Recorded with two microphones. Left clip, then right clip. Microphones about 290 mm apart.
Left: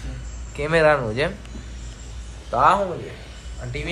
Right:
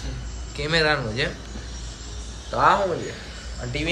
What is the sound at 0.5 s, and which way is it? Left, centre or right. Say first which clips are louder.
Speech: left 4 dB; centre.